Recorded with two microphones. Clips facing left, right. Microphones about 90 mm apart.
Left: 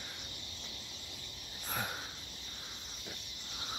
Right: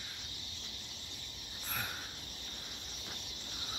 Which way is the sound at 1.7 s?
15° left (ahead or behind).